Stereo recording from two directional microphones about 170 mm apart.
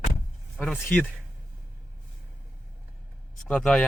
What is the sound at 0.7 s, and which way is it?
Speech, centre (ahead or behind).